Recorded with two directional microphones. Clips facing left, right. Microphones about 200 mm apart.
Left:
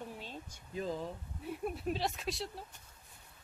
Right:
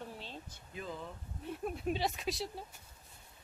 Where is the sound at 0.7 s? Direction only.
35° left (ahead or behind).